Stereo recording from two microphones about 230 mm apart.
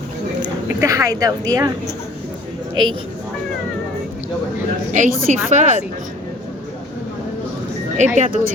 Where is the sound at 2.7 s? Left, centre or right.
Right.